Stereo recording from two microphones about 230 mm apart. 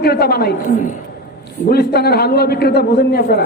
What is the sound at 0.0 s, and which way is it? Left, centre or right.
Speech, left.